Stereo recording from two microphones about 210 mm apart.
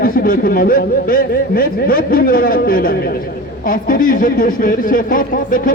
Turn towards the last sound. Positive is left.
turn(degrees=40)  # may be behind; listen again after turning